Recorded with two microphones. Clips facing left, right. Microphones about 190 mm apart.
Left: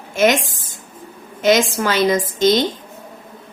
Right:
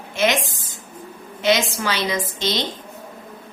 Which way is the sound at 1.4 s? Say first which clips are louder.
Left 5 dB; 50° left (ahead or behind).